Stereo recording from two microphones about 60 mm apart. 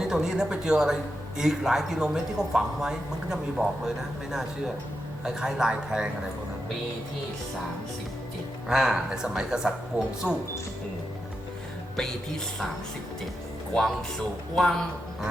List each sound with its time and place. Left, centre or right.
0.0 s speech: centre
8.6 s speech: centre
9.9 s speech: right
14.5 s speech: centre